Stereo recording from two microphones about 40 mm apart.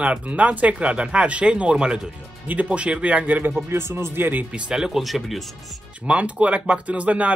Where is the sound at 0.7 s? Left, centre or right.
Right.